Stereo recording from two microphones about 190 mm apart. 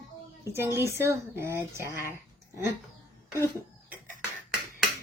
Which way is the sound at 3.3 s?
15° left (ahead or behind).